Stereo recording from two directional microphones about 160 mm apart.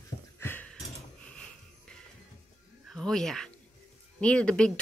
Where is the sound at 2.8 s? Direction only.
Centre (ahead or behind).